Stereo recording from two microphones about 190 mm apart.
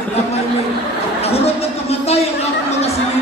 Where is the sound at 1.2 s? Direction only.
30° left (ahead or behind).